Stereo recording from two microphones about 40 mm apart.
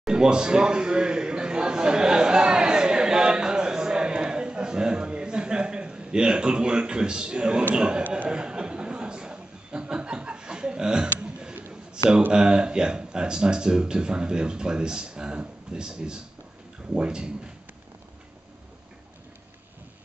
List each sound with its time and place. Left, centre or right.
0.1 s a sound: right
7.7 s speech: right
8.3 s chuckle: right
12.3 s speech: right